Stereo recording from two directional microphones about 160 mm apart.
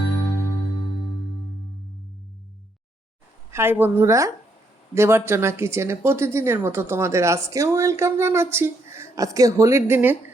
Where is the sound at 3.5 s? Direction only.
15° right (ahead or behind).